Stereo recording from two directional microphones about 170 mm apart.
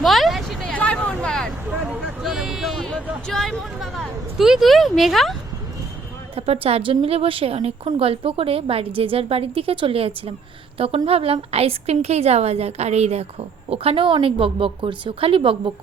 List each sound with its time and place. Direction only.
0.0 s vehicle: centre (ahead or behind)
1.9 s a sound: centre (ahead or behind)
3.2 s a woman's voice: centre (ahead or behind)
6.3 s a woman's voice: 35° right (ahead or behind)